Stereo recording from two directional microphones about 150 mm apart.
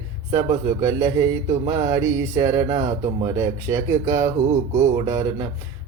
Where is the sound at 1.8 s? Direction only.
20° right (ahead or behind).